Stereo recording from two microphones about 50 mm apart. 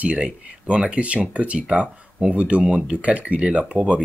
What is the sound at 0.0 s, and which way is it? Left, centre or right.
Speech, right.